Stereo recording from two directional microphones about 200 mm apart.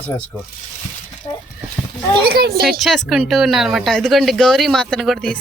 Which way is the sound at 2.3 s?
50° right (ahead or behind).